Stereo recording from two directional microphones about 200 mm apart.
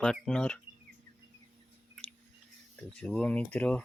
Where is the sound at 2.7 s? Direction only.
5° left (ahead or behind).